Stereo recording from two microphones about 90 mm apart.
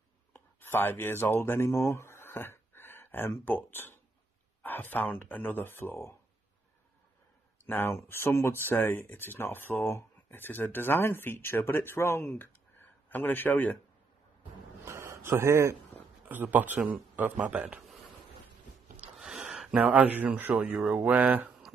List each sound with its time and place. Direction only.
0.6 s speech: 20° left (ahead or behind)
7.6 s speech: 20° left (ahead or behind)
14.9 s a sound: 30° right (ahead or behind)
16.3 s speech: 20° right (ahead or behind)
17.4 s mantra: 15° right (ahead or behind)
19.1 s a sound: 5° right (ahead or behind)
20.6 s mantra: 15° right (ahead or behind)